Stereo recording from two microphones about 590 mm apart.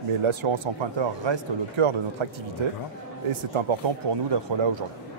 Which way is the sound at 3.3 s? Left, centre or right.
Right.